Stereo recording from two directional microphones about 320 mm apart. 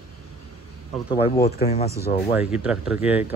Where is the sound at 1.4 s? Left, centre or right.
Centre.